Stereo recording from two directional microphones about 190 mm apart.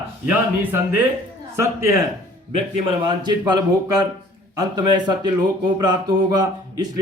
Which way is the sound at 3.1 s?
25° right (ahead or behind).